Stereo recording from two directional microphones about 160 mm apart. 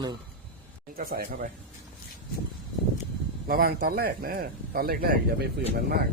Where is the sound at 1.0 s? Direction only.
65° right (ahead or behind).